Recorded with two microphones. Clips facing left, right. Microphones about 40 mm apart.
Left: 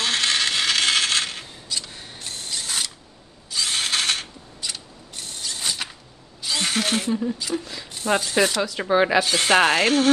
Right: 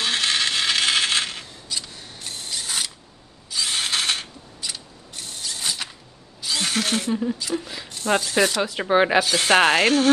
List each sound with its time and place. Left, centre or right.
0.0 s coin: centre
3.4 s ratchet: centre
6.4 s a sound: centre
7.3 s speech: centre
7.6 s speech: centre
7.9 s speech: centre
8.7 s speech: right
9.2 s speech: centre